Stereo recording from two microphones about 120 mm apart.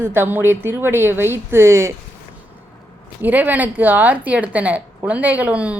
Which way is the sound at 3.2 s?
15° right (ahead or behind).